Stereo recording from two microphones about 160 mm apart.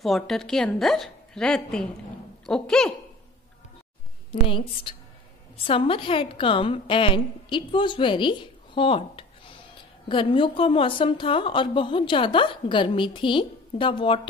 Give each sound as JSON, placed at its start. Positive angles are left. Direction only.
{"t": 0.0, "sound": "a woman's voice", "side_deg": 0}
{"t": 4.3, "sound": "a woman's voice", "side_deg": 35}